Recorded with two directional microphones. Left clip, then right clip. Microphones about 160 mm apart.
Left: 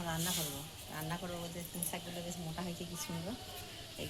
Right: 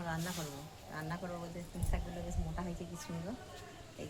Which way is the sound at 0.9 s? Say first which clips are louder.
Even; centre (ahead or behind).